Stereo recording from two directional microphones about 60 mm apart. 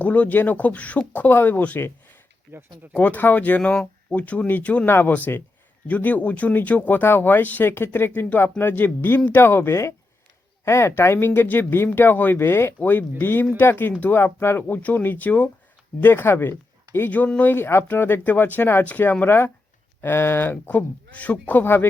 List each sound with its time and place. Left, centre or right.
0.0 s speech: left
2.5 s speech: right
2.9 s speech: left
3.6 s speech: centre
4.9 s speech: left
16.0 s speech: left
17.3 s speech: left
17.6 s speech: left
21.1 s speech: left
21.6 s speech: left